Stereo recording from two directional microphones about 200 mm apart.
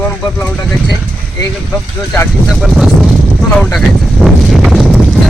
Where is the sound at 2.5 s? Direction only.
Centre (ahead or behind).